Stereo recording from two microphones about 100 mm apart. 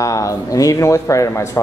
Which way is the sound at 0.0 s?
35° left (ahead or behind).